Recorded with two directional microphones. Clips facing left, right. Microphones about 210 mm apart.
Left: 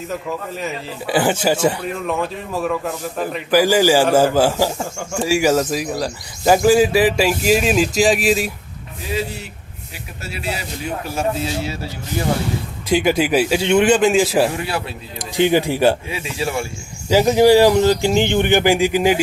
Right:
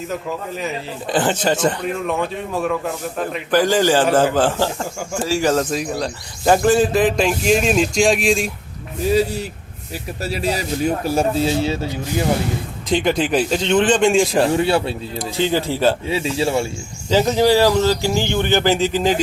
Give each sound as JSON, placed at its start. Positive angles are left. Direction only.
{"t": 0.1, "sound": "a man's voice", "side_deg": 0}
{"t": 9.9, "sound": "speech", "side_deg": -40}
{"t": 12.9, "sound": "a man's voice", "side_deg": 5}
{"t": 14.6, "sound": "speech", "side_deg": -30}
{"t": 15.2, "sound": "a man's voice", "side_deg": 15}
{"t": 16.0, "sound": "speech", "side_deg": -30}
{"t": 17.1, "sound": "a man's voice", "side_deg": 10}